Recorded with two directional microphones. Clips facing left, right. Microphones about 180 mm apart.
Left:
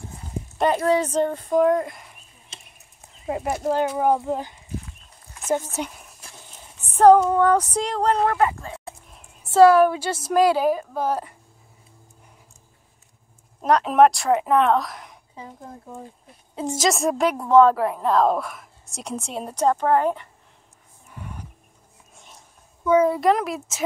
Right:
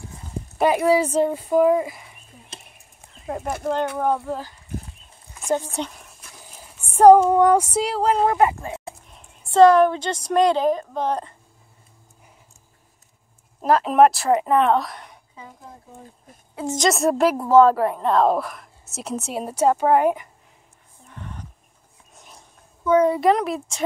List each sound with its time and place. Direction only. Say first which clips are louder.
0.6 s speech: right 2 dB; 10° right (ahead or behind)
3.3 s speech: left 2 dB; 10° left (ahead or behind)
5.3 s a sound: right 1 dB; 5° left (ahead or behind)
6.5 s a sound: right 6 dB; 10° right (ahead or behind)
8.3 s speech: right 3 dB; 20° right (ahead or behind)
9.5 s a woman's voice: even; 5° left (ahead or behind)
13.6 s a woman's voice: right 1 dB; centre (ahead or behind)
16.7 s a woman's voice: right 3 dB; centre (ahead or behind)
21.1 s wild animals: even; 10° left (ahead or behind)
22.8 s a woman's voice: right 1 dB; 5° left (ahead or behind)